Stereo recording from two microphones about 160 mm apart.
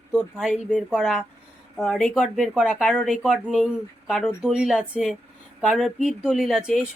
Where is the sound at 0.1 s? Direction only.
5° right (ahead or behind).